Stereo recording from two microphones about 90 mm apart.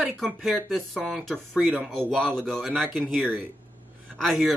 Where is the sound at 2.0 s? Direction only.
10° right (ahead or behind).